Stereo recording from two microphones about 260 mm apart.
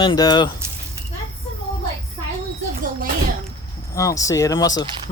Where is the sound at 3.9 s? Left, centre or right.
Centre.